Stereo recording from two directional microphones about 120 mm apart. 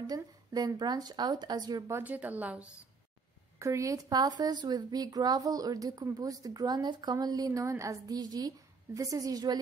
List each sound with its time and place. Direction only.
0.0 s speech: 35° right (ahead or behind)
2.0 s a woman's voice: 15° right (ahead or behind)
3.5 s speech: 25° right (ahead or behind)